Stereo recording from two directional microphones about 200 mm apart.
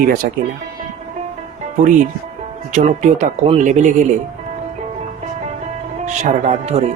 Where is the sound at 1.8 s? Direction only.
40° right (ahead or behind).